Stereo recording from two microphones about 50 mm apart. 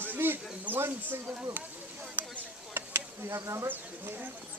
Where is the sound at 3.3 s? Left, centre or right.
Right.